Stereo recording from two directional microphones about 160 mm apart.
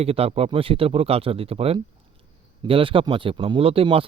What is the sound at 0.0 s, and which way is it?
Speech, 40° right (ahead or behind).